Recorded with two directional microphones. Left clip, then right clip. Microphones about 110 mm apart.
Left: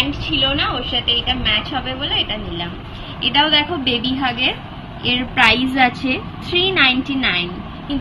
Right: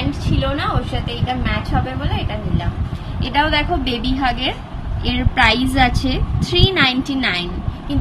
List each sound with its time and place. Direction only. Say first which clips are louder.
0.2 s a woman's voice: left 3 dB; 35° right (ahead or behind)
3.2 s a woman's voice: left 3 dB; 60° right (ahead or behind); by 7.4 s 45° right (ahead or behind)